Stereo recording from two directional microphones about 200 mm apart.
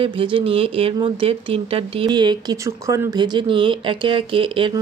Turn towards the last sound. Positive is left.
turn(degrees=-25)  # may be behind; listen again after turning